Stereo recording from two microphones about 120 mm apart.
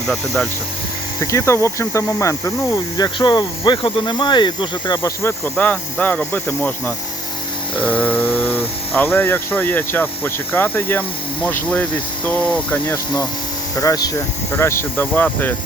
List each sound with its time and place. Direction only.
1.2 s speech: 25° left (ahead or behind)
3.0 s speech: 40° left (ahead or behind)
5.5 s speech: 10° left (ahead or behind)
13.7 s speech: 30° left (ahead or behind); by 15.5 s 15° left (ahead or behind)